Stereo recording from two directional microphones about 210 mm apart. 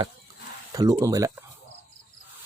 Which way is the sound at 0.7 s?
15° right (ahead or behind).